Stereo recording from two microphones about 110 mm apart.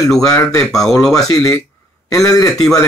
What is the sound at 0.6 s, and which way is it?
Speech, 5° left (ahead or behind).